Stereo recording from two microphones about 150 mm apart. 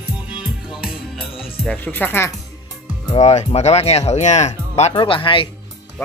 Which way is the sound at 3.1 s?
45° left (ahead or behind).